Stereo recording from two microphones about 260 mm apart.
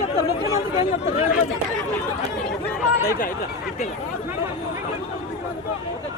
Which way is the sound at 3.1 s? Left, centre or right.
Left.